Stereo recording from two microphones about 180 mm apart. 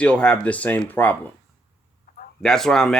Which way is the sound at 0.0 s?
5° left (ahead or behind).